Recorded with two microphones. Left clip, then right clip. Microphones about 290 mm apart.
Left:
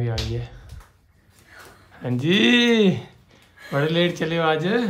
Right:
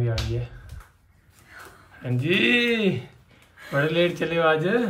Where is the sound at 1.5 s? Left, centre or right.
Centre.